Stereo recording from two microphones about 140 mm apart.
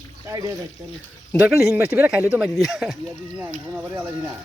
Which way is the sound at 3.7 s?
15° right (ahead or behind).